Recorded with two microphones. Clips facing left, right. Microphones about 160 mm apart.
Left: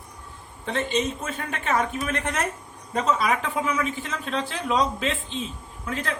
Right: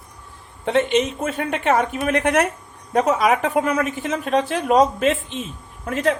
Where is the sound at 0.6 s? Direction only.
70° right (ahead or behind).